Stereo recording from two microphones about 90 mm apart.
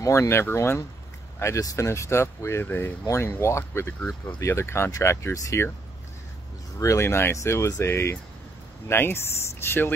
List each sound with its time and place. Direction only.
0.0 s speech: 35° left (ahead or behind)
6.8 s speech: 35° left (ahead or behind)